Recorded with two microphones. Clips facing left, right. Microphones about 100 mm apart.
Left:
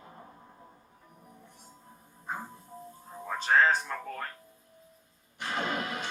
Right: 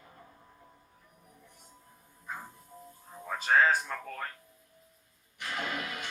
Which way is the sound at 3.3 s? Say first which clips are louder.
Left 1 dB; centre (ahead or behind).